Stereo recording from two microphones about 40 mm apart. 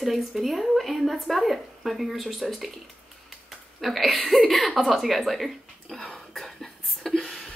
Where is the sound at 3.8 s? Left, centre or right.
Centre.